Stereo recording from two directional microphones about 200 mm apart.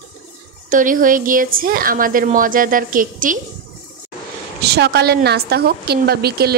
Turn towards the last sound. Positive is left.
turn(degrees=-50)  # may be behind; listen again after turning